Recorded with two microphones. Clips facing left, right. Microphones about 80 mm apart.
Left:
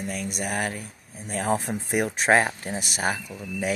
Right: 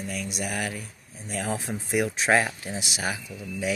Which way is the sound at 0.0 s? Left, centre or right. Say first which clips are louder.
Left 2 dB; left.